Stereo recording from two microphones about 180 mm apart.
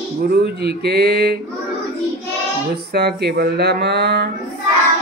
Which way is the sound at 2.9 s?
65° right (ahead or behind).